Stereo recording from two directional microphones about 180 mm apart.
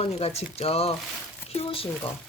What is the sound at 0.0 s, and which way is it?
Speech, 35° left (ahead or behind).